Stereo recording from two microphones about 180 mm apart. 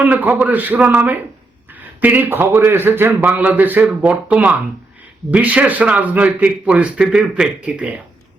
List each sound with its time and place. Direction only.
0.0 s speech: 10° right (ahead or behind)